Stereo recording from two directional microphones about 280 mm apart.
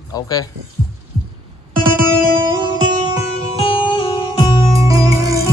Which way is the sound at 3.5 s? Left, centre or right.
Centre.